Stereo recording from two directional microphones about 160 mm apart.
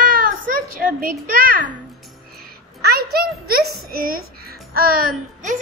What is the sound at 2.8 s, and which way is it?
A child's voice, 75° right (ahead or behind).